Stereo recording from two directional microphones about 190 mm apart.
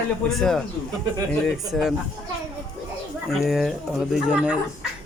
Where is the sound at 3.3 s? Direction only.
Centre (ahead or behind).